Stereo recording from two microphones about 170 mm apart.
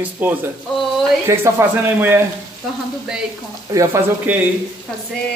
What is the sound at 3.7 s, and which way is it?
Speech, 15° right (ahead or behind).